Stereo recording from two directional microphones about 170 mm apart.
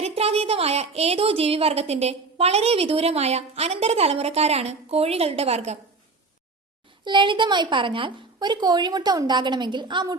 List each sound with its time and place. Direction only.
0.0 s a woman's voice: 35° right (ahead or behind)
7.0 s a woman's voice: 30° right (ahead or behind)